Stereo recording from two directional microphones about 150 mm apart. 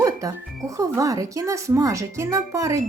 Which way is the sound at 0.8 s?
20° right (ahead or behind).